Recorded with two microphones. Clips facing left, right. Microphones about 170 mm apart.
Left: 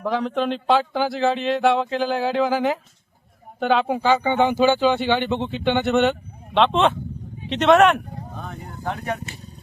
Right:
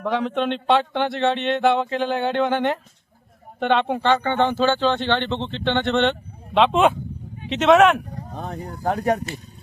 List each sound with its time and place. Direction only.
0.0 s speech: centre (ahead or behind)
8.4 s speech: 35° right (ahead or behind)